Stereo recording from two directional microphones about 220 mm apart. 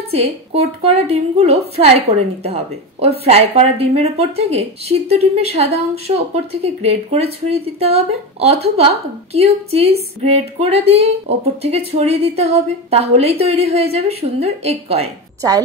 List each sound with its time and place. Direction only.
0.1 s speech: 25° right (ahead or behind)